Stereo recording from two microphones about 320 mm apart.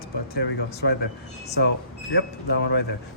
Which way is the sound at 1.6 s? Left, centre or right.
Left.